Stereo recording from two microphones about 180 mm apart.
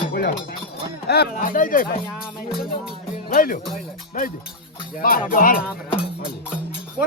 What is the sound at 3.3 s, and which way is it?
Speech, 50° left (ahead or behind).